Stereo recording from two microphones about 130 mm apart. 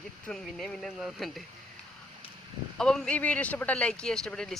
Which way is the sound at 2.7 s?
5° left (ahead or behind).